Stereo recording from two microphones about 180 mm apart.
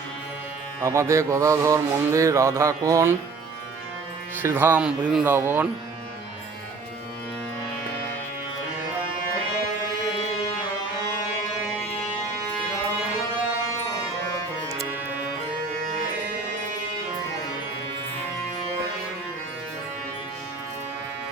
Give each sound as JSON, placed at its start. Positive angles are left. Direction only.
{"t": 0.8, "sound": "music", "side_deg": -15}
{"t": 4.4, "sound": "music", "side_deg": -10}